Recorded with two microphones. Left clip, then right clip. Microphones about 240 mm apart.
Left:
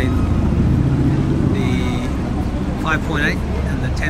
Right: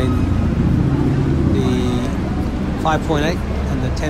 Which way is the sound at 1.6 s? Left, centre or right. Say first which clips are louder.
Right 2 dB; centre.